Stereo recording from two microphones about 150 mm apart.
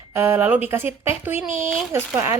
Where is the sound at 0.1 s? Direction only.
15° right (ahead or behind).